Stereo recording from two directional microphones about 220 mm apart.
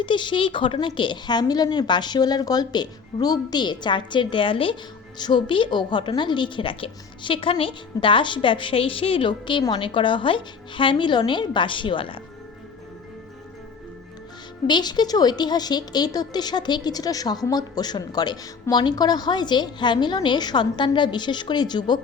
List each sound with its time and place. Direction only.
0.0 s a woman's voice: 20° left (ahead or behind)
14.7 s a woman's voice: 20° left (ahead or behind)